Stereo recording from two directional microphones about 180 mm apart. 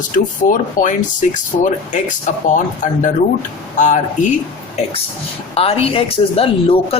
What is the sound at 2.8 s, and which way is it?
Speech, 45° left (ahead or behind).